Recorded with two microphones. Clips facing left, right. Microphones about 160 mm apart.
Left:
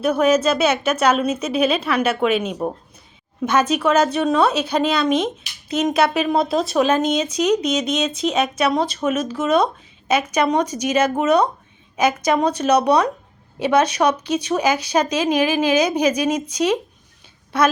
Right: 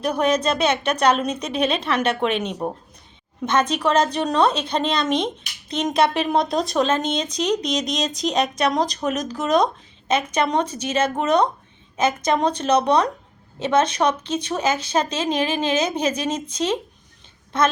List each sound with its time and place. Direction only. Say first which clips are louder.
0.0 s speech: left 4 dB; 5° left (ahead or behind)
7.7 s speech: left 3 dB; 35° right (ahead or behind)
8.1 s speech: left 2 dB; centre (ahead or behind)